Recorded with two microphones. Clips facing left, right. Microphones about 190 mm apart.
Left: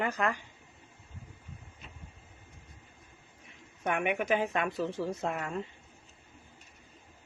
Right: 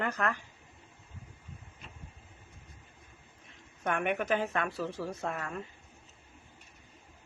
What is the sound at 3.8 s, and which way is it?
A woman's voice, 10° left (ahead or behind).